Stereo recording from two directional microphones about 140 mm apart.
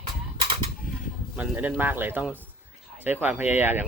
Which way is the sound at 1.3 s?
10° right (ahead or behind).